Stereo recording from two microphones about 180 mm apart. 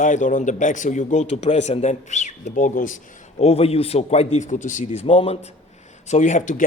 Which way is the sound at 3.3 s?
35° left (ahead or behind).